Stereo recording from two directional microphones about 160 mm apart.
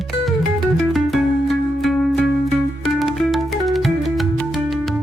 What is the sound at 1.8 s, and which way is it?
Music, centre (ahead or behind).